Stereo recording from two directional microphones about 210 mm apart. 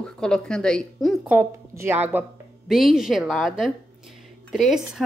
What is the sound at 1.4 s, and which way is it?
A woman's voice, 10° right (ahead or behind).